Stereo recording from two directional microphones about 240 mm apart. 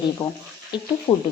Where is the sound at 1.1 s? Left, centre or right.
Left.